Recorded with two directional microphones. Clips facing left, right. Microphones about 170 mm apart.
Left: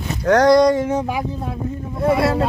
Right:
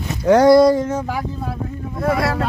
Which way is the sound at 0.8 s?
15° left (ahead or behind).